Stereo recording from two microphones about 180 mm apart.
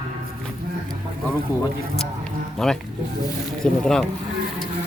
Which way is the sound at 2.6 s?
Centre (ahead or behind).